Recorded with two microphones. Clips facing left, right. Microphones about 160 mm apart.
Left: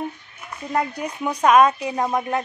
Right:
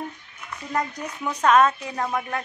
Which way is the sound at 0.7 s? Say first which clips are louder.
Left 4 dB; 10° left (ahead or behind).